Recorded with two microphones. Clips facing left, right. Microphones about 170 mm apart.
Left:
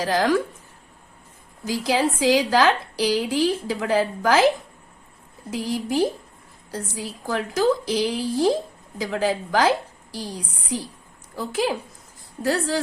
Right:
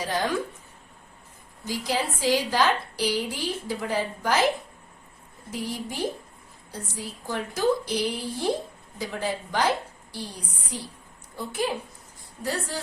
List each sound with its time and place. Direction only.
0.0 s a woman's voice: 90° left
1.6 s a woman's voice: 90° left
5.5 s a woman's voice: 90° left